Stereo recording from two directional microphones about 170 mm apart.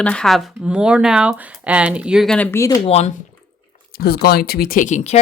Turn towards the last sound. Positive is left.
turn(degrees=45)  # may be behind; listen again after turning